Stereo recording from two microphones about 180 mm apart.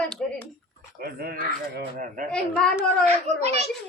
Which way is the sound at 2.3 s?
5° left (ahead or behind).